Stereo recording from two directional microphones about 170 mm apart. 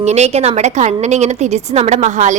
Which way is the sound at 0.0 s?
40° right (ahead or behind).